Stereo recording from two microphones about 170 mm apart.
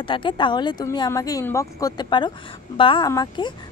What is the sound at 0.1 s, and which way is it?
Speech, 30° left (ahead or behind).